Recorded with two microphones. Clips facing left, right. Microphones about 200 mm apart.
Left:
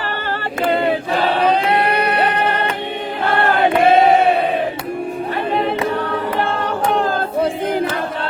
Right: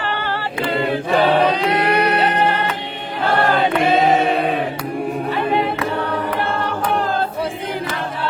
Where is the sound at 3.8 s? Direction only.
55° left (ahead or behind).